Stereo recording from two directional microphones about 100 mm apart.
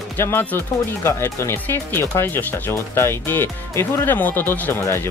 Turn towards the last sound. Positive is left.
turn(degrees=25)  # may be behind; listen again after turning